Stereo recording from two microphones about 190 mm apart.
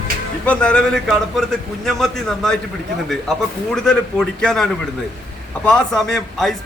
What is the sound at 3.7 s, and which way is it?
A man's voice, centre (ahead or behind).